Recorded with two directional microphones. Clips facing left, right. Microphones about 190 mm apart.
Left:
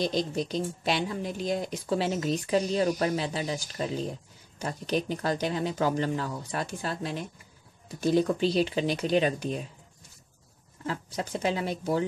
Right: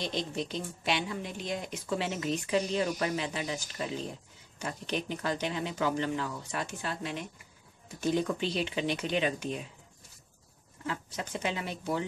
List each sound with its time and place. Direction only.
0.0 s a woman's voice: 40° left (ahead or behind)
10.9 s a woman's voice: 35° left (ahead or behind)